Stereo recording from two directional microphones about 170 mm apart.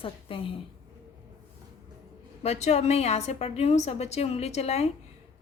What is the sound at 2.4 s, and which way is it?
A woman's voice, 40° left (ahead or behind).